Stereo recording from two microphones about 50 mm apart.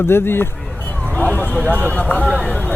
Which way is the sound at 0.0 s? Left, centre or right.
Left.